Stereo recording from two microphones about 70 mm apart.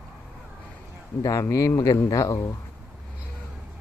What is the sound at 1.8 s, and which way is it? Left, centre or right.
Speech, left.